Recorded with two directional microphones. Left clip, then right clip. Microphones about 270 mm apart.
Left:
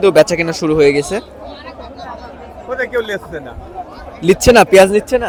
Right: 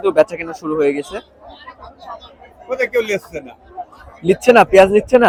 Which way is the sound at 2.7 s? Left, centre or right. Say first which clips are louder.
Right 1 dB; centre.